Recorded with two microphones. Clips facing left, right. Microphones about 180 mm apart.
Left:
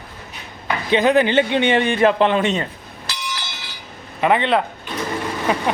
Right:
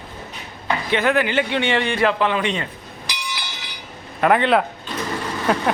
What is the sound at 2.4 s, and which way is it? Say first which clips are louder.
Speech: left 3 dB; 45° left (ahead or behind).